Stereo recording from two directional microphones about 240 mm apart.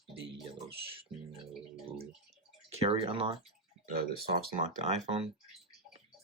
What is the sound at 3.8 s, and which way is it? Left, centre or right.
Speech, right.